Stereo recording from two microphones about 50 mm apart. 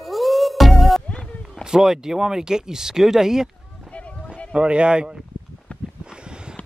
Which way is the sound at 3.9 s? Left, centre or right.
Left.